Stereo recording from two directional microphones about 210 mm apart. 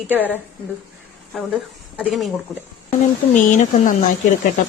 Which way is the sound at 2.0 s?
Centre (ahead or behind).